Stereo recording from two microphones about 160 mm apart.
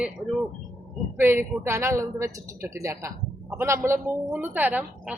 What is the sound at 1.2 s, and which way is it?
Speech, 15° right (ahead or behind).